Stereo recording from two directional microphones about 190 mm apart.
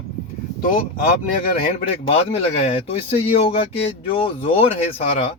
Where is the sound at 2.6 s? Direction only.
35° left (ahead or behind).